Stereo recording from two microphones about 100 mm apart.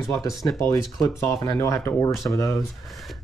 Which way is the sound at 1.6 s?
30° left (ahead or behind).